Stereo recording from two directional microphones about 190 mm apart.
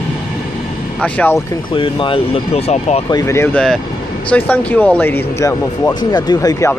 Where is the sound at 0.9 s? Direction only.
5° left (ahead or behind); by 3.0 s 35° left (ahead or behind).